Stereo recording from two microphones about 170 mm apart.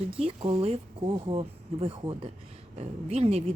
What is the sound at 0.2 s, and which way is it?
Speech, 35° right (ahead or behind).